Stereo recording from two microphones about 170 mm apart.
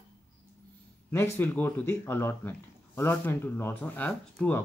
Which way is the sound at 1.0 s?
15° left (ahead or behind).